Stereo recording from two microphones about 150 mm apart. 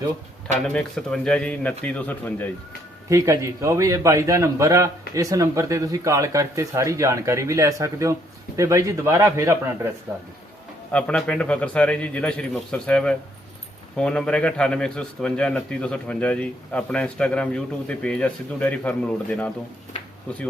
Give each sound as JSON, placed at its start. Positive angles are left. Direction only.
{"t": 0.6, "sound": "a man's voice", "side_deg": 5}
{"t": 3.1, "sound": "a man's voice", "side_deg": -20}
{"t": 10.9, "sound": "a man's voice", "side_deg": 5}